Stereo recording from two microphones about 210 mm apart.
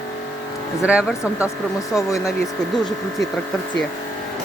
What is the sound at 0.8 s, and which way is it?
Speech, 5° right (ahead or behind).